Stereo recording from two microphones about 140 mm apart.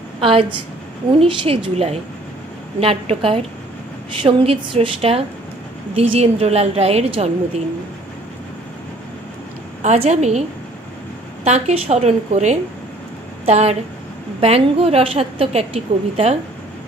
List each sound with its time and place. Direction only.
0.2 s a woman's voice: 40° right (ahead or behind)
9.8 s a woman's voice: 50° right (ahead or behind)
11.4 s a woman's voice: 50° right (ahead or behind)